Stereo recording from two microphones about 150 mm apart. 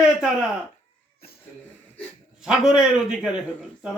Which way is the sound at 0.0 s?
5° right (ahead or behind).